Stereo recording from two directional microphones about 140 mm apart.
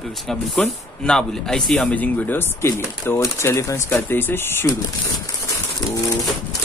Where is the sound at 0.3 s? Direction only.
5° left (ahead or behind).